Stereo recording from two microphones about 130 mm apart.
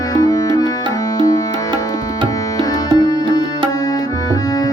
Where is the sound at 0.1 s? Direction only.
25° left (ahead or behind).